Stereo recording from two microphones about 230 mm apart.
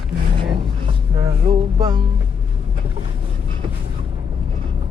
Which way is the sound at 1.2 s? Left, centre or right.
Right.